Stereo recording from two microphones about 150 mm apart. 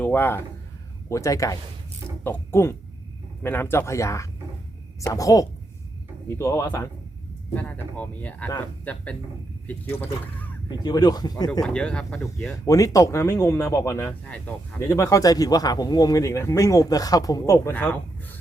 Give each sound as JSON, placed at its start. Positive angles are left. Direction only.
{"t": 0.0, "sound": "a man's voice", "side_deg": 15}
{"t": 10.7, "sound": "speech", "side_deg": 25}
{"t": 11.6, "sound": "speech", "side_deg": 5}
{"t": 12.6, "sound": "speech", "side_deg": 20}